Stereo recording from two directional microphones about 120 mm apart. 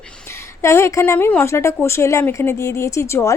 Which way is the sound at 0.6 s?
25° left (ahead or behind).